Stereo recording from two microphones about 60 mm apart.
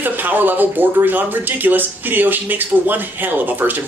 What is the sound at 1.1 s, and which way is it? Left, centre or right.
Speech, right.